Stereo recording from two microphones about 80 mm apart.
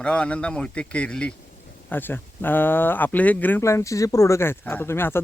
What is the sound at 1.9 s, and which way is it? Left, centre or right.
Speech, left.